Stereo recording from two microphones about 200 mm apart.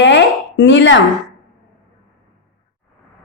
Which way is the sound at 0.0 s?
60° left (ahead or behind).